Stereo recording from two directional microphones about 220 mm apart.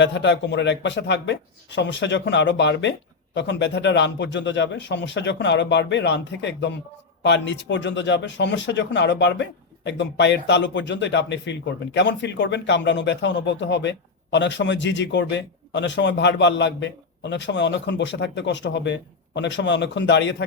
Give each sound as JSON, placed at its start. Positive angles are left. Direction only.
{"t": 0.0, "sound": "speech", "side_deg": 55}